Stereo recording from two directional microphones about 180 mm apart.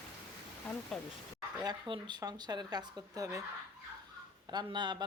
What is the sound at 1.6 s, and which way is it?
Speech, 25° right (ahead or behind).